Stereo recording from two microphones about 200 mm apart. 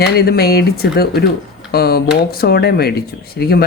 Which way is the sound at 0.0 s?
55° left (ahead or behind).